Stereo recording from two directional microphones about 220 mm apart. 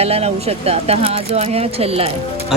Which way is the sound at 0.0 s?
30° right (ahead or behind).